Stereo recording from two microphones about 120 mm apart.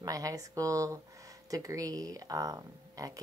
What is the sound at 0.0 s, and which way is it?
A woman's voice, 30° right (ahead or behind).